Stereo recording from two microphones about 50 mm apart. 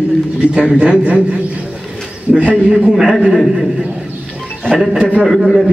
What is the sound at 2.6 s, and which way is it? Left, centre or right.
Speech, right.